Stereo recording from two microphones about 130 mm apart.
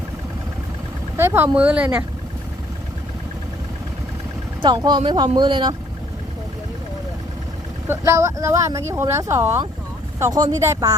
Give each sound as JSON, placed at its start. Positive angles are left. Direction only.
{"t": 1.1, "sound": "vehicle", "side_deg": -15}
{"t": 1.5, "sound": "speech", "side_deg": -10}
{"t": 4.6, "sound": "speech", "side_deg": -35}
{"t": 7.9, "sound": "speech", "side_deg": -20}